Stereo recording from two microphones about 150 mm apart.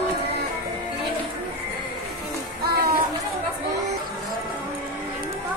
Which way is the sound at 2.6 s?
80° right.